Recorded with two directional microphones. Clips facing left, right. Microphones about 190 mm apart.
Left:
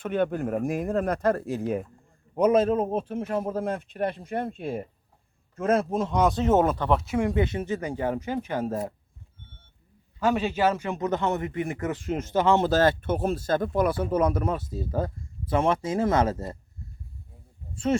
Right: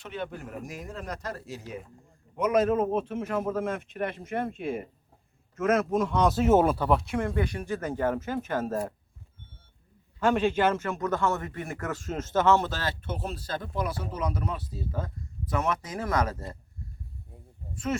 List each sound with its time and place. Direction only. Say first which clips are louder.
0.0 s speech: left 10 dB; 55° left (ahead or behind)
2.4 s speech: left 3 dB; 30° left (ahead or behind)
6.2 s speech: even; 5° right (ahead or behind)
7.2 s a man's voice: left 4 dB; 20° left (ahead or behind)
10.2 s a man's voice: even; 10° left (ahead or behind)
12.6 s speech: left 11 dB; 45° left (ahead or behind); by 16.6 s 25° left (ahead or behind)